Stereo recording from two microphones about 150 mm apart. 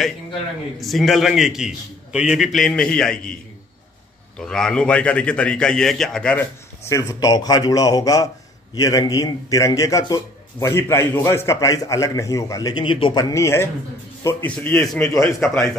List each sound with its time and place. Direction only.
0.7 s a man's voice: centre (ahead or behind)
4.4 s a man's voice: 5° left (ahead or behind)
6.9 s a man's voice: 20° left (ahead or behind); by 15.6 s 5° left (ahead or behind)